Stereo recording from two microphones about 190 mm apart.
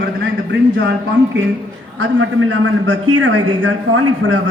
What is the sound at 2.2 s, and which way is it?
A man's voice, 80° right.